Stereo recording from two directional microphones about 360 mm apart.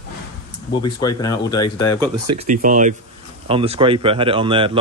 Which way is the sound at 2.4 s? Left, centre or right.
Right.